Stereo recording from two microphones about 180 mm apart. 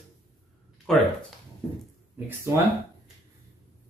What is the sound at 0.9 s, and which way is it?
Speech, centre (ahead or behind).